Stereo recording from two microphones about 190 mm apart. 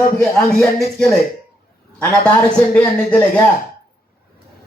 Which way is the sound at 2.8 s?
5° left (ahead or behind).